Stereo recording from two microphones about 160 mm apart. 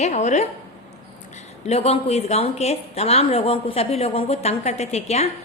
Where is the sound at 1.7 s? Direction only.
40° left (ahead or behind).